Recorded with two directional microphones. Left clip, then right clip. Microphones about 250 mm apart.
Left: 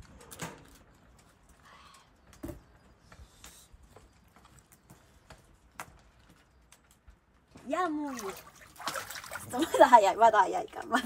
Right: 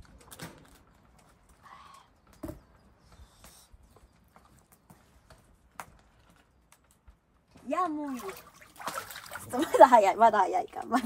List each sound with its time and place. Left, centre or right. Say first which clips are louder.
7.6 s splash: right 1 dB; centre
9.5 s speech: right 2 dB; centre